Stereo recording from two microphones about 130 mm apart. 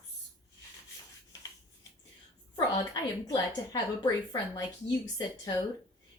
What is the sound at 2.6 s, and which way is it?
A woman's voice, 30° left (ahead or behind).